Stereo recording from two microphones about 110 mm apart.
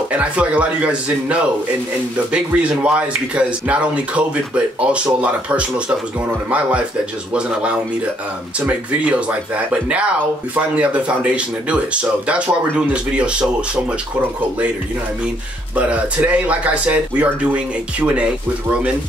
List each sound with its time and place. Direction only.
0.1 s speech: 10° right (ahead or behind)
7.3 s speech: 10° right (ahead or behind)
15.7 s speech: 10° right (ahead or behind)